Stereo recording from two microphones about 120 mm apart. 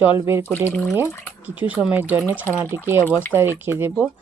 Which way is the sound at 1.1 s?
20° left (ahead or behind).